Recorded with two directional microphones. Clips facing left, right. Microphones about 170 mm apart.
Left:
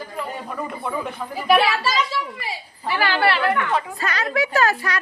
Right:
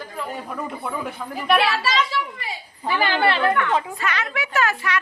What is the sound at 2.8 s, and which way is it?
Speech, 20° right (ahead or behind).